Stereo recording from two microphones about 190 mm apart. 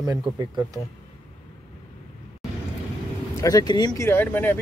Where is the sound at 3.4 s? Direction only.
20° left (ahead or behind).